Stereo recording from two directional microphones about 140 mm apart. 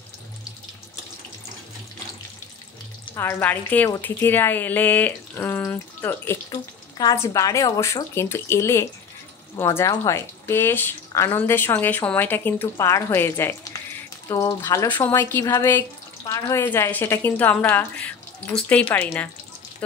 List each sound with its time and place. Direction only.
3.2 s speech: 15° left (ahead or behind)
6.5 s speech: 25° left (ahead or behind)